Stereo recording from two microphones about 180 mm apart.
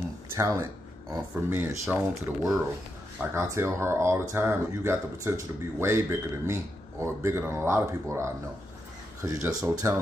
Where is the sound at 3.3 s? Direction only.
15° right (ahead or behind).